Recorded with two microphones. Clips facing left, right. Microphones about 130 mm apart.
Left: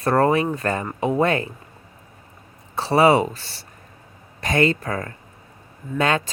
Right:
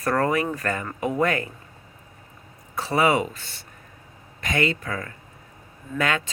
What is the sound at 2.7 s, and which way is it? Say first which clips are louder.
Speech: left 5 dB; 30° left (ahead or behind).